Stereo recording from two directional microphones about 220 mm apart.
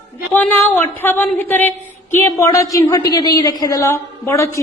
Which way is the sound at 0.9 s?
10° left (ahead or behind).